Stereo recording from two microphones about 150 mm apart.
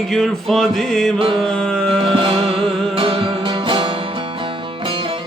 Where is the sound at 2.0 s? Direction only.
35° right (ahead or behind).